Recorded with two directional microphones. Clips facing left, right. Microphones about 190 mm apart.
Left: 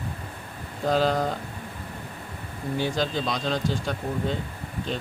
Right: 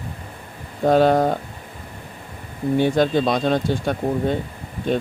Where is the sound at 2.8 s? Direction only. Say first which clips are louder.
Right 9 dB; 55° right (ahead or behind).